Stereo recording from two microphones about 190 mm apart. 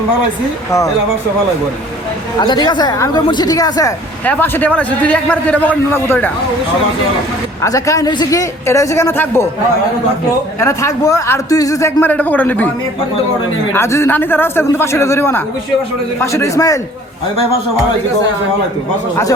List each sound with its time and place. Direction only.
2.4 s a man's voice: 25° left (ahead or behind)
7.6 s a man's voice: 15° left (ahead or behind)
10.6 s a man's voice: 15° left (ahead or behind)
13.7 s a man's voice: 15° left (ahead or behind)